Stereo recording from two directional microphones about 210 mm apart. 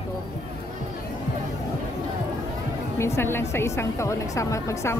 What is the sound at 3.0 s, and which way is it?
A woman's voice, 10° left (ahead or behind).